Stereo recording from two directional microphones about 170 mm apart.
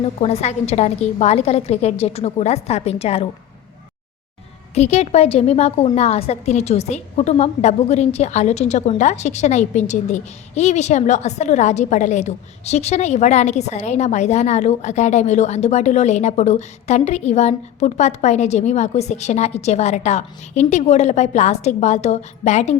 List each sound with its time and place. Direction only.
0.2 s a woman's voice: 40° left (ahead or behind)
4.7 s a woman's voice: 40° left (ahead or behind)